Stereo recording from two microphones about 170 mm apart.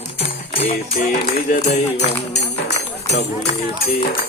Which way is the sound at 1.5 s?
45° left (ahead or behind).